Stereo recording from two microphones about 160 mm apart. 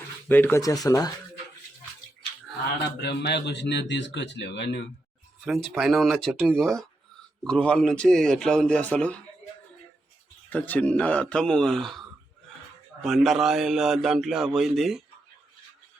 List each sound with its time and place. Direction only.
0.3 s speech: 10° left (ahead or behind)
3.0 s a man's voice: 90° left
5.5 s speech: centre (ahead or behind)
7.4 s speech: 5° left (ahead or behind)
10.5 s speech: 10° left (ahead or behind)